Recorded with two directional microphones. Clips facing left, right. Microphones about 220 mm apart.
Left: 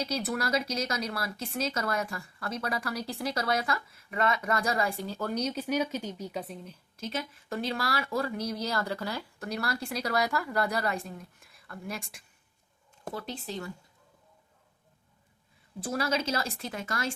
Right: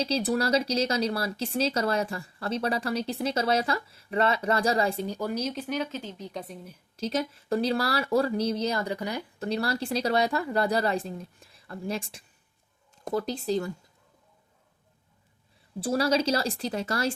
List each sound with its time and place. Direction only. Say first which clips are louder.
0.0 s speech: right 5 dB; 30° right (ahead or behind)
5.3 s speech: even; centre (ahead or behind)
7.0 s speech: right 7 dB; 35° right (ahead or behind)
15.8 s speech: right 6 dB; 35° right (ahead or behind)